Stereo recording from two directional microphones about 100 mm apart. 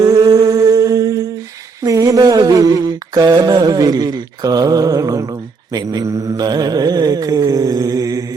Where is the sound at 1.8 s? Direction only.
35° right (ahead or behind).